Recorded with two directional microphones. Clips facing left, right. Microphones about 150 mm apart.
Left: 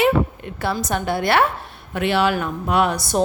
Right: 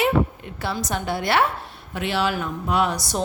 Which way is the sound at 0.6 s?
55° left (ahead or behind).